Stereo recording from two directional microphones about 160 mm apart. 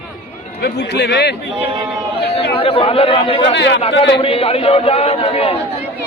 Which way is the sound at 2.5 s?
35° left (ahead or behind).